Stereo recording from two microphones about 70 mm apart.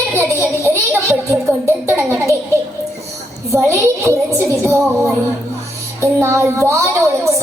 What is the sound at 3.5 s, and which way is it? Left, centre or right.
A woman's voice, right.